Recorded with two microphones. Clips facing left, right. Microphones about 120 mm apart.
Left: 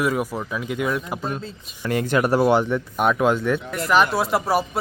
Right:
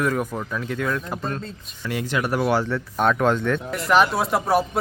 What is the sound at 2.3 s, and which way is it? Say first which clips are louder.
Speech: left 3 dB; 25° left (ahead or behind).